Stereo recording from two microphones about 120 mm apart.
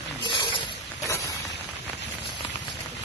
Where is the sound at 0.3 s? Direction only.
40° left (ahead or behind).